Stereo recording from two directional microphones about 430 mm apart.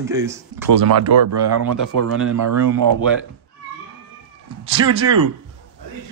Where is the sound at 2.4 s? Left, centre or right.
Right.